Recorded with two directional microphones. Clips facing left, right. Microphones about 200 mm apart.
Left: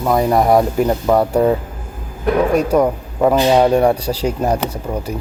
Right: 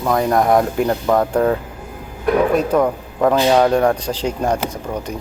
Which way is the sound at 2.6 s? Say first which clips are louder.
Left 2 dB; 10° left (ahead or behind).